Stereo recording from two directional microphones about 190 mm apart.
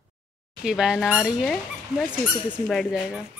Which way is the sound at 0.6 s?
5° right (ahead or behind).